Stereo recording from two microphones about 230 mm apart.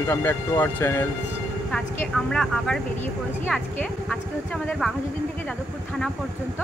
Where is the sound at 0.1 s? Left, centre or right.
Centre.